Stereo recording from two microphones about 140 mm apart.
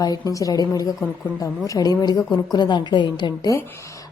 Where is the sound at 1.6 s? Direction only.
25° left (ahead or behind).